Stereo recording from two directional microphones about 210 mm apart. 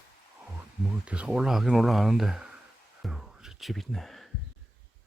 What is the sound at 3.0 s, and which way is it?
Music, centre (ahead or behind).